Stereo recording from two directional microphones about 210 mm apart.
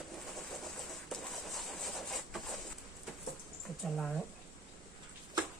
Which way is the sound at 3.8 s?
Centre (ahead or behind).